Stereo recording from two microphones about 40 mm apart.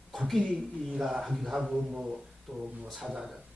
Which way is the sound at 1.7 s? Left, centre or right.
Right.